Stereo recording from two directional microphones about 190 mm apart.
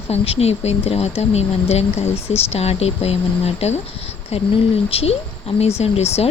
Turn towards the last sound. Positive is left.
turn(degrees=35)  # may be behind; listen again after turning